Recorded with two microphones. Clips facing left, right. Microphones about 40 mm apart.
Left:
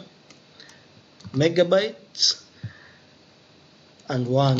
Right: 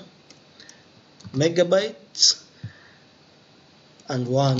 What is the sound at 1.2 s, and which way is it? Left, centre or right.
Speech, centre.